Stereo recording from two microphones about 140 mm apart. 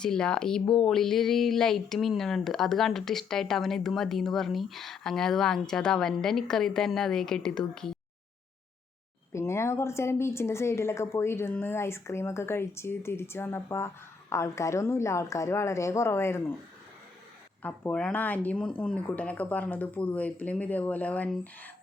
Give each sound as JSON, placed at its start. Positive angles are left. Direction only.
{"t": 0.0, "sound": "speech", "side_deg": 5}
{"t": 9.3, "sound": "speech", "side_deg": 20}
{"t": 17.6, "sound": "speech", "side_deg": 10}